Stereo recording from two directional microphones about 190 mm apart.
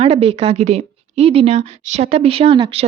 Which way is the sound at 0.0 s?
30° right (ahead or behind).